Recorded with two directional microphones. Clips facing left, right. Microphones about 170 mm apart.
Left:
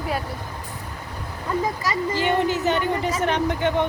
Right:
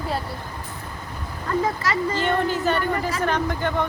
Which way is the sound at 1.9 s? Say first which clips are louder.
Even; 15° left (ahead or behind).